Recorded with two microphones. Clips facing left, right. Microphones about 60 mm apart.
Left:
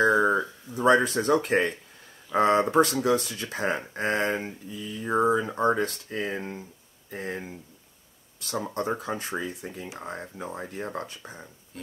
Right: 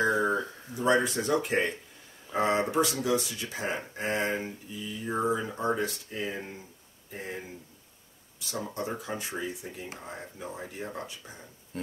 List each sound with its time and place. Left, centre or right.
0.0 s a sound: left
2.3 s speech: left
6.3 s speech: left
7.1 s speech: left
8.8 s speech: left
11.7 s music: right